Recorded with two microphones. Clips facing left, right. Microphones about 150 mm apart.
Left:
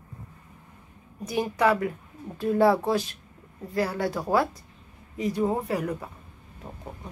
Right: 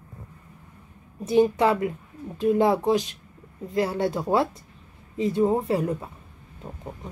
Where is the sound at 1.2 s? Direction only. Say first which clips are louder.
Right 5 dB; 25° right (ahead or behind).